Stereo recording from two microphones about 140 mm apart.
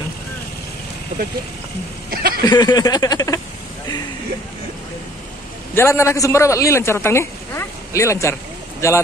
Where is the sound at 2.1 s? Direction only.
90° right.